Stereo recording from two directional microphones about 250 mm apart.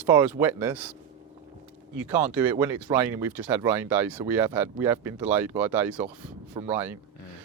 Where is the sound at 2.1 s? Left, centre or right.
Centre.